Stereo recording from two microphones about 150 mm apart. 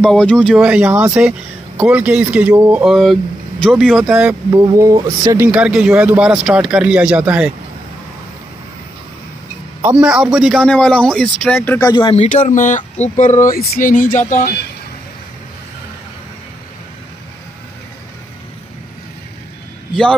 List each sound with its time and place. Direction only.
0.0 s speech: 5° left (ahead or behind)
4.5 s speech: 20° right (ahead or behind)
5.5 s speech: 5° right (ahead or behind)
9.8 s speech: 10° right (ahead or behind)
10.6 s speech: 5° left (ahead or behind)
11.8 s speech: 30° left (ahead or behind)
12.2 s speech: 55° left (ahead or behind)
19.9 s a man's voice: 5° left (ahead or behind)